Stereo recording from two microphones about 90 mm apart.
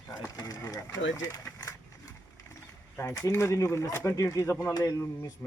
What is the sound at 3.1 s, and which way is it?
Speech, 40° left (ahead or behind).